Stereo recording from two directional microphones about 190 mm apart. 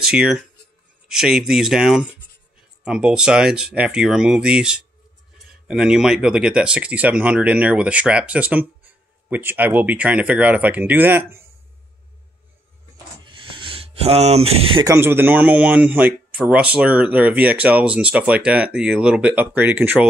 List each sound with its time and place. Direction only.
0.0 s speech: 5° right (ahead or behind)
13.2 s a sound: 25° right (ahead or behind)
14.9 s speech: 10° right (ahead or behind)